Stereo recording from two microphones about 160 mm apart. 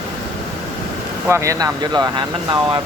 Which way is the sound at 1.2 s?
15° right (ahead or behind).